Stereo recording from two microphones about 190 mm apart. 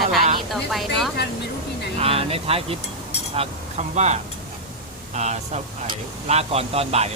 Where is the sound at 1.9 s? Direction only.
30° right (ahead or behind).